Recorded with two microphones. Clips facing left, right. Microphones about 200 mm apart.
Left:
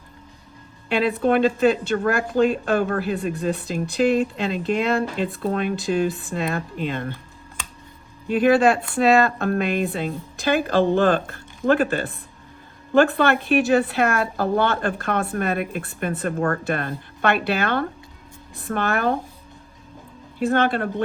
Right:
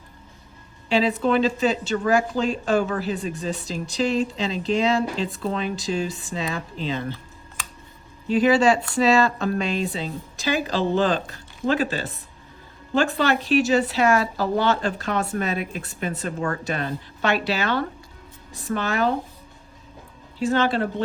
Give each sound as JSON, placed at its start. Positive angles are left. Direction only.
{"t": 0.9, "sound": "speech", "side_deg": 55}
{"t": 8.3, "sound": "speech", "side_deg": 55}
{"t": 20.4, "sound": "speech", "side_deg": 55}